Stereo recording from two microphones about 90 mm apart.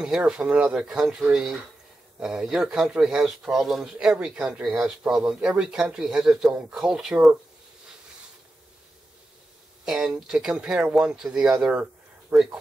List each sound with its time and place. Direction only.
0.0 s a man's voice: 10° right (ahead or behind)
9.8 s a man's voice: 5° right (ahead or behind)